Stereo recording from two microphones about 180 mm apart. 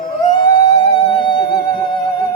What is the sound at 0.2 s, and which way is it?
Music, 25° left (ahead or behind).